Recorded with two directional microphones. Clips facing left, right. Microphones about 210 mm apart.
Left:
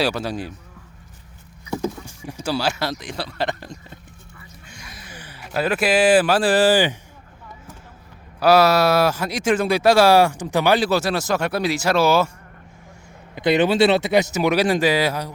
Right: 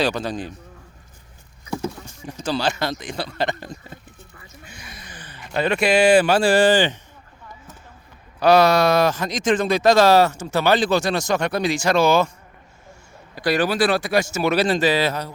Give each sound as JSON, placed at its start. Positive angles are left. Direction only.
{"t": 0.0, "sound": "speech", "side_deg": 5}
{"t": 2.0, "sound": "a sound", "side_deg": 10}
{"t": 3.0, "sound": "a man's voice", "side_deg": 0}
{"t": 8.4, "sound": "speech", "side_deg": 5}
{"t": 13.3, "sound": "speech", "side_deg": 20}